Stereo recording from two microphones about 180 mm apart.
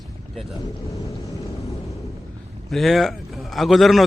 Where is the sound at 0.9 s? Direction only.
20° left (ahead or behind).